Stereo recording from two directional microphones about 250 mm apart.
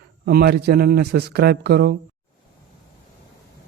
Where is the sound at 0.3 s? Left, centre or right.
Right.